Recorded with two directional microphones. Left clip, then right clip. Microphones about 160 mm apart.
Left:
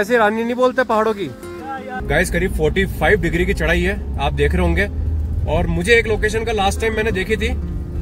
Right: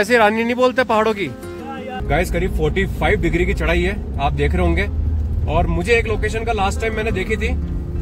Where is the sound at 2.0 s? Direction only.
25° left (ahead or behind).